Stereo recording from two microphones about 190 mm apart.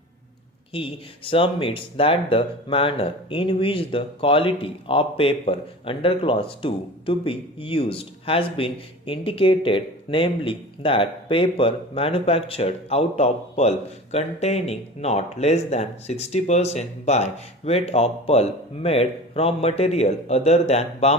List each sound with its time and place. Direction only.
0.7 s speech: 30° left (ahead or behind)